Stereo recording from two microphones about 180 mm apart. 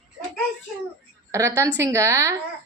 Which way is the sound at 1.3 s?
20° right (ahead or behind).